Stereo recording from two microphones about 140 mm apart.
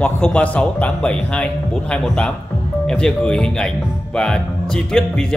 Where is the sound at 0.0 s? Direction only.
5° left (ahead or behind).